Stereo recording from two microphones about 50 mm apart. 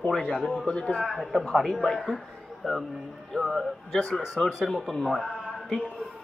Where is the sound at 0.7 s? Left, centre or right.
Left.